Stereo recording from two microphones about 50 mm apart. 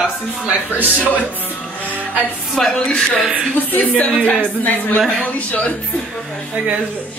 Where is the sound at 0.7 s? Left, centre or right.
Right.